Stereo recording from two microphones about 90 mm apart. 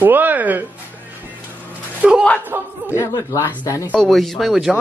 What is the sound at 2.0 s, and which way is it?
Speech, 15° right (ahead or behind).